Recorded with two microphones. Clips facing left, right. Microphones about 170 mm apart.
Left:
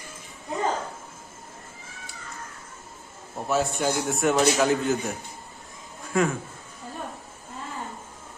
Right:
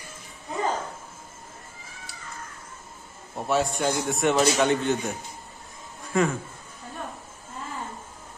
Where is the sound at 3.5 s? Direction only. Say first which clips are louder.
Even; centre (ahead or behind).